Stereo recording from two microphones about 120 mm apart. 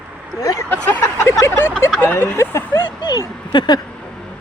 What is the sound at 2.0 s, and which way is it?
Speech, 20° left (ahead or behind).